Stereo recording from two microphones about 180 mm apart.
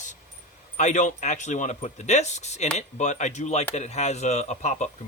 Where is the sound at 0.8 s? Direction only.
40° left (ahead or behind).